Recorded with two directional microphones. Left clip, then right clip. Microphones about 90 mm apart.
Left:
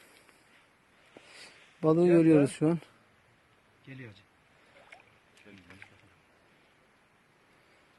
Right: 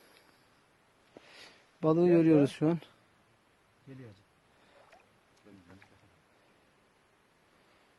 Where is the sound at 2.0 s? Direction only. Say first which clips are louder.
Left 2 dB; centre (ahead or behind).